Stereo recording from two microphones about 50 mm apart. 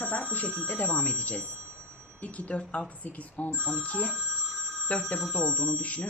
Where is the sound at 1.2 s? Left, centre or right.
Left.